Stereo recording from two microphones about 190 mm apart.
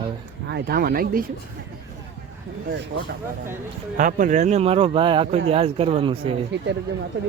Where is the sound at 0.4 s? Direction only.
55° right (ahead or behind).